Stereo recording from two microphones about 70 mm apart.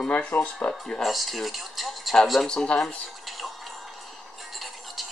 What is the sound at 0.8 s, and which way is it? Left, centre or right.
Speech, centre.